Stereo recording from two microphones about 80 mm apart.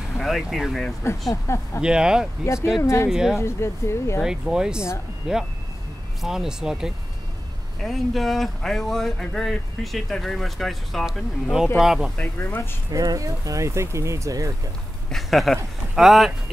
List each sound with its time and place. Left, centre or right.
0.2 s speech: centre
1.3 s speech: left
1.8 s speech: centre
2.4 s speech: left
3.1 s speech: centre
3.3 s speech: left
4.2 s speech: centre
12.2 s speech: left
12.9 s speech: right
15.0 s speech: centre